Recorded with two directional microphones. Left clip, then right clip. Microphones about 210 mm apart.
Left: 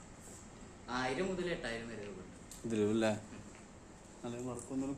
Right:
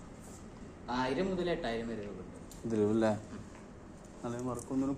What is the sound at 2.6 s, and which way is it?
Speech, 25° left (ahead or behind).